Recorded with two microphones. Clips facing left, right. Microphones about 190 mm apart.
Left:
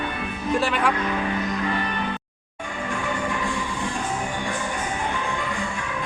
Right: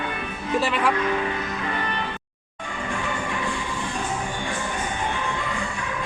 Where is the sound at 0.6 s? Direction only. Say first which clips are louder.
Right 1 dB; centre (ahead or behind).